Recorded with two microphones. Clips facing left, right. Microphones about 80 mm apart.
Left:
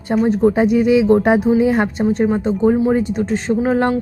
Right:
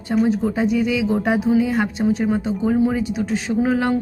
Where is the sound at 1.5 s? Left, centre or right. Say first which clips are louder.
Left 4 dB; left.